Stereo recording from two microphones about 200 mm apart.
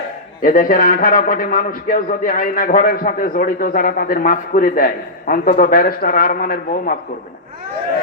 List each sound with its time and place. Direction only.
0.4 s a man's voice: 45° left (ahead or behind)